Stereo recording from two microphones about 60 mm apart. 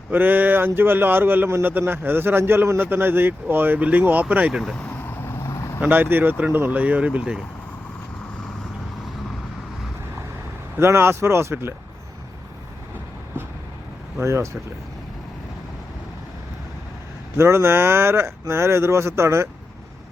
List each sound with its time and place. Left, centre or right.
0.1 s speech: right
4.6 s speech: centre
5.0 s vehicle: left
5.4 s vehicle: left
5.8 s speech: right
6.7 s speech: right
10.8 s speech: right
14.2 s speech: right
17.3 s speech: right